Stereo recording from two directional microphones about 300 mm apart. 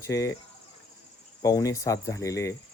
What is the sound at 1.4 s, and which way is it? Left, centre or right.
Speech, centre.